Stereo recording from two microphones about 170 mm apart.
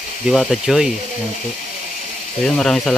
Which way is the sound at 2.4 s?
5° left (ahead or behind).